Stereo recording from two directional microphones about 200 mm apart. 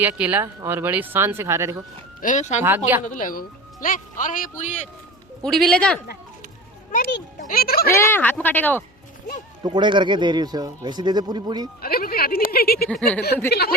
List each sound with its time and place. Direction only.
0.0 s speech: 10° right (ahead or behind)
2.2 s a man's voice: 35° left (ahead or behind)
2.6 s speech: 10° right (ahead or behind)
3.1 s a man's voice: 40° left (ahead or behind)
5.4 s speech: centre (ahead or behind)
6.9 s speech: 45° left (ahead or behind)
7.9 s speech: 10° left (ahead or behind)
9.6 s speech: 25° right (ahead or behind)
11.8 s speech: 50° left (ahead or behind)
12.9 s speech: 5° left (ahead or behind)
13.5 s speech: 55° left (ahead or behind)